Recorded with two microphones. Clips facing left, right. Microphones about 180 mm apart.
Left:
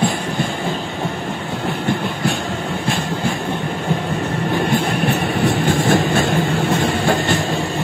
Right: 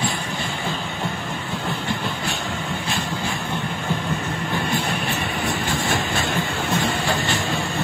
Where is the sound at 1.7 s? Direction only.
55° left (ahead or behind).